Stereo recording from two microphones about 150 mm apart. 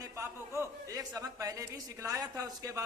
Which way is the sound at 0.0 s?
20° right (ahead or behind).